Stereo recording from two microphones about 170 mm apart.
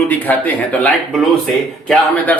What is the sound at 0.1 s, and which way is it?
A man's voice, 10° left (ahead or behind).